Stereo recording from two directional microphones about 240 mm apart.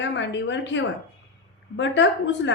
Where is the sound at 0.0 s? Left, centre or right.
Left.